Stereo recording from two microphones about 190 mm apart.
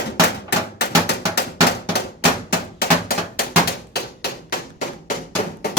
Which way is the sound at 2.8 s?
55° left (ahead or behind).